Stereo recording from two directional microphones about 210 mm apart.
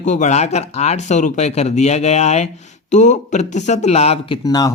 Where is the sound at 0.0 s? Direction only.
35° left (ahead or behind).